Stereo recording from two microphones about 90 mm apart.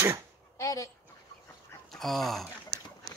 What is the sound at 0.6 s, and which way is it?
Speech, 35° left (ahead or behind).